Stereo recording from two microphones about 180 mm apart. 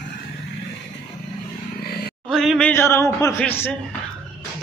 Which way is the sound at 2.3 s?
Centre (ahead or behind).